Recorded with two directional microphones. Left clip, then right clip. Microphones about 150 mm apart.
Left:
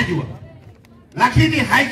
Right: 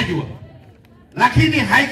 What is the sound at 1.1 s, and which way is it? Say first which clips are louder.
Speech: right 1 dB; 30° left (ahead or behind).